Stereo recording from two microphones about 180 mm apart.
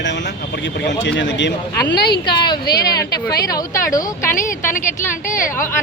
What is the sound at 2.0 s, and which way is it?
Speech, 60° left (ahead or behind).